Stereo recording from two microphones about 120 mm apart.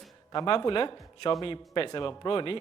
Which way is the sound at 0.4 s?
45° left (ahead or behind).